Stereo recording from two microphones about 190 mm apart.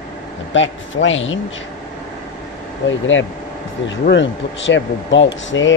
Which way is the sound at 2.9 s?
85° left.